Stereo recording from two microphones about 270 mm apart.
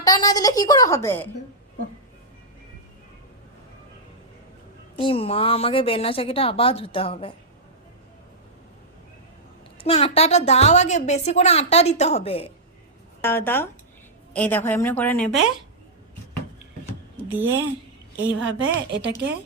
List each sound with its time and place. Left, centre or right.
0.0 s a woman's voice: centre
4.9 s a woman's voice: centre
9.7 s a woman's voice: left
13.2 s a woman's voice: centre
18.2 s speech: right